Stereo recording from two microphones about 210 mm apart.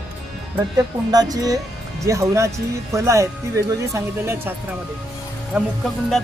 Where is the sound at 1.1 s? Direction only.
20° right (ahead or behind).